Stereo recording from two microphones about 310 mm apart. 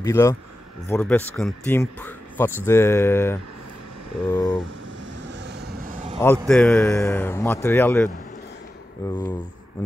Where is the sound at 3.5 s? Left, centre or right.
Right.